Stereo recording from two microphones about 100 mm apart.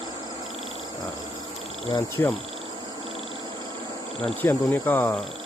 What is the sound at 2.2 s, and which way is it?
Speech, 20° left (ahead or behind).